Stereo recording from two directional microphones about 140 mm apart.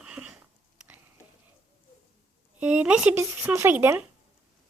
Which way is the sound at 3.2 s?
20° right (ahead or behind).